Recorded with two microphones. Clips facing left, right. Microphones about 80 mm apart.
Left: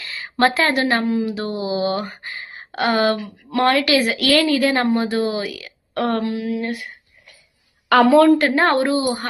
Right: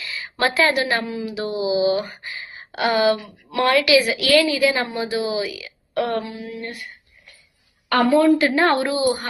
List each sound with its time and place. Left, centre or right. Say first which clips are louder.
0.0 s a woman's voice: left 4 dB; left
6.3 s a sound: left 8 dB; left
7.9 s a woman's voice: left 4 dB; left
8.3 s a woman's voice: left 1 dB; left